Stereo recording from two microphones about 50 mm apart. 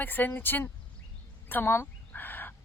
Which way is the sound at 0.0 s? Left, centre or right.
Left.